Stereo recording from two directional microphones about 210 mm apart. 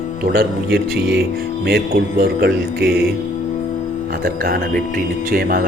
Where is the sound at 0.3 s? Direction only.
50° right (ahead or behind).